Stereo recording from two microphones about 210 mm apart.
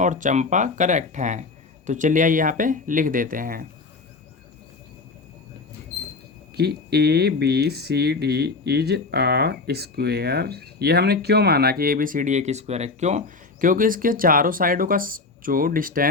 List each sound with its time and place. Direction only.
0.0 s speech: 35° right (ahead or behind)
6.6 s speech: 50° right (ahead or behind)